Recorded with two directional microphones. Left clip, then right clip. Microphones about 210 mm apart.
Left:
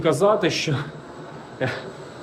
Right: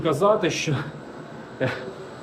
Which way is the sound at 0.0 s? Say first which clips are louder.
Left 2 dB; 20° left (ahead or behind).